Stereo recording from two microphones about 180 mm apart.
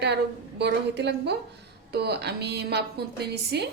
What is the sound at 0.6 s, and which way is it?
A woman's voice, 70° right (ahead or behind).